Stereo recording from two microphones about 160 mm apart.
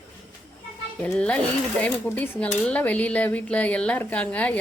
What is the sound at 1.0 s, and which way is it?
Speech, 10° left (ahead or behind).